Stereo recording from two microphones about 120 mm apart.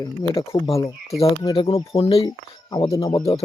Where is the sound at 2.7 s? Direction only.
30° left (ahead or behind).